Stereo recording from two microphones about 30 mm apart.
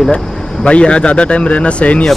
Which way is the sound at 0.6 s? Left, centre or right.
Left.